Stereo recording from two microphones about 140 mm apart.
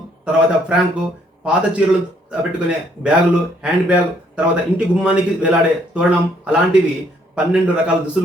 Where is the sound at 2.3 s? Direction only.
10° right (ahead or behind).